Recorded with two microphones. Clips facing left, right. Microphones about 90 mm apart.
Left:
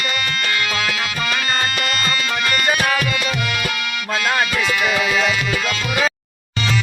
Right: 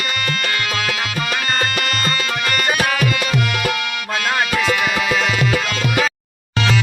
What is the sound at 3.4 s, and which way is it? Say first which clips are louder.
Music: right 3 dB; 55° right (ahead or behind).